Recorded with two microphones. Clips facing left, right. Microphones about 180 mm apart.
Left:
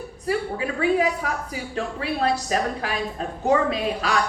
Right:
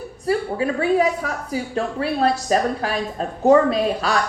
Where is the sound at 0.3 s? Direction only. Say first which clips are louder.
Right 4 dB; 40° right (ahead or behind).